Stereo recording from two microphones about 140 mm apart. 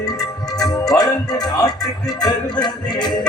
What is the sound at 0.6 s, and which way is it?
Music, 25° left (ahead or behind).